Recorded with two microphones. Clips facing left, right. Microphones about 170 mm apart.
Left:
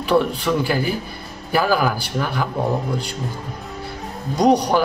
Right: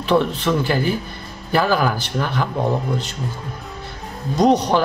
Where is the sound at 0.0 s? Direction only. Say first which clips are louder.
Even; 10° left (ahead or behind).